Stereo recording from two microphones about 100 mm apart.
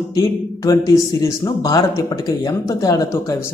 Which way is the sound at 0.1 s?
35° left (ahead or behind).